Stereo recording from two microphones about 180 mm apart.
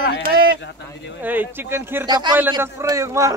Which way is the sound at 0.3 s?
55° right (ahead or behind).